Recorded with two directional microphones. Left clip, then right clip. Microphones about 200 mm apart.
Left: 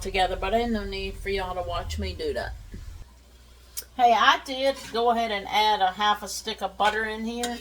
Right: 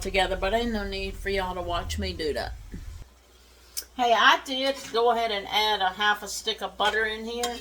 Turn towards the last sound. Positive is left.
turn(degrees=-10)  # may be behind; listen again after turning